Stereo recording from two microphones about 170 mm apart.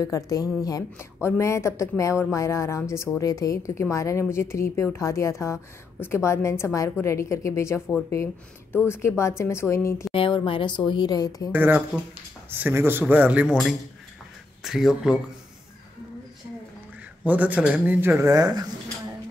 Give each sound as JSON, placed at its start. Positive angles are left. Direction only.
{"t": 0.0, "sound": "a woman's voice", "side_deg": 20}
{"t": 10.1, "sound": "a woman's voice", "side_deg": 30}
{"t": 11.5, "sound": "speech", "side_deg": -10}
{"t": 17.2, "sound": "speech", "side_deg": -10}